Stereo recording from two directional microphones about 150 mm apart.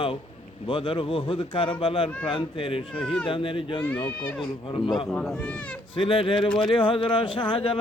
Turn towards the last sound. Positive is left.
turn(degrees=35)  # may be behind; listen again after turning